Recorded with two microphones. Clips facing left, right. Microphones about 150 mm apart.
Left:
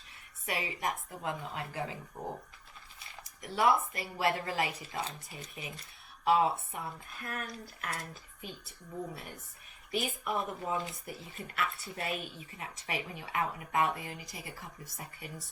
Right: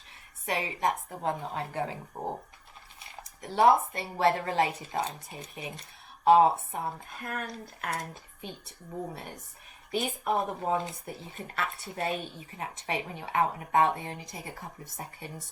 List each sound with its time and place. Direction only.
0.4 s a woman's voice: 30° right (ahead or behind)